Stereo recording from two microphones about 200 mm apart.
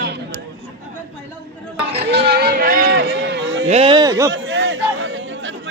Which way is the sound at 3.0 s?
60° right (ahead or behind).